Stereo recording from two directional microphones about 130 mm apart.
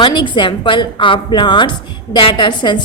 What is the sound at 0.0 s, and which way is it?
A woman's voice, 40° left (ahead or behind).